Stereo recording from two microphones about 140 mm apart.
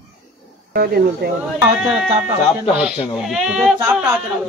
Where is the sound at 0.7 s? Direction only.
90° right.